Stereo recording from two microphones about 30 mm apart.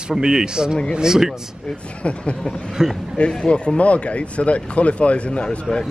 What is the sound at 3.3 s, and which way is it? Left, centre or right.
Speech, left.